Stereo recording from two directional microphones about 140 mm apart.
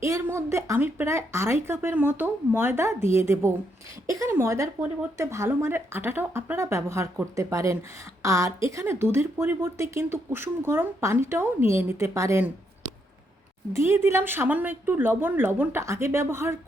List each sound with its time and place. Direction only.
0.0 s a woman's voice: 20° right (ahead or behind)
13.7 s speech: 15° right (ahead or behind)